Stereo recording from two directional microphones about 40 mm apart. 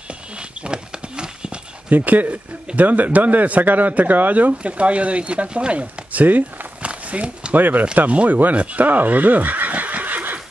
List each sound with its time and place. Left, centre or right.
0.1 s horse: right
1.9 s speech: right
6.2 s speech: right
6.8 s a sound: right
7.5 s speech: right
8.1 s speech: right
8.5 s a sound: right